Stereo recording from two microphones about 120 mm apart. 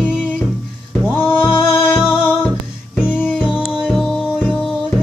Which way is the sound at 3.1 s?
15° left (ahead or behind).